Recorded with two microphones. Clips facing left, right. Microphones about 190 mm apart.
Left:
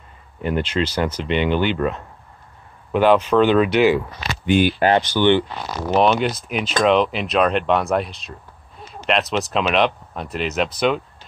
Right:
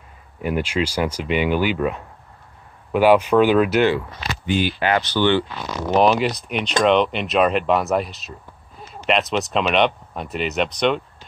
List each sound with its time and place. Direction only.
0.4 s speech: 10° right (ahead or behind)
4.5 s speech: 50° left (ahead or behind)
5.1 s speech: 20° left (ahead or behind)
5.9 s speech: centre (ahead or behind)